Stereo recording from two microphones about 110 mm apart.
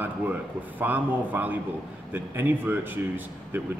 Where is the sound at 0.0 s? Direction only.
15° right (ahead or behind).